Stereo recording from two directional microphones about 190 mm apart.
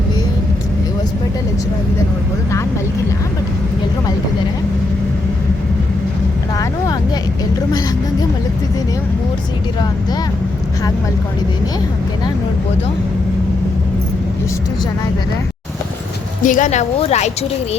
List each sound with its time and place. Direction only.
16.4 s speech: 40° left (ahead or behind)